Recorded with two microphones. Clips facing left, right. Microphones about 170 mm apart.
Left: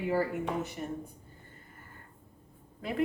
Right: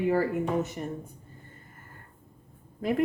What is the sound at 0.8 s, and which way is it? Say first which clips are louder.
Speech: right 3 dB; 45° right (ahead or behind).